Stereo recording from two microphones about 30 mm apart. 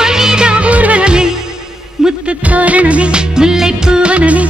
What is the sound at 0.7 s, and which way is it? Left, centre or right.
Music, right.